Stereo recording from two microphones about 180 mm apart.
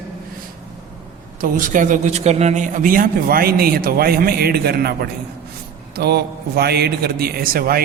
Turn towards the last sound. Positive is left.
turn(degrees=-55)  # may be behind; listen again after turning